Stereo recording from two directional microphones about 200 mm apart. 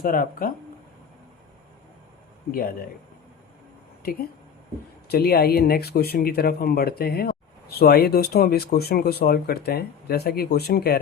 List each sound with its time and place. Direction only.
0.0 s speech: 45° left (ahead or behind)
2.5 s speech: 45° left (ahead or behind)
4.0 s speech: 50° left (ahead or behind)